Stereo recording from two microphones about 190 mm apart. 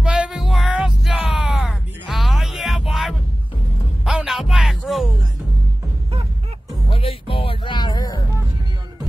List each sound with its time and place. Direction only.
0.0 s music: 5° right (ahead or behind)
6.9 s music: 30° left (ahead or behind)